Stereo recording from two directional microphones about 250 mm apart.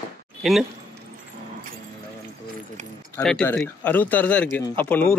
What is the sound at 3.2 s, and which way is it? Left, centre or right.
Speech, centre.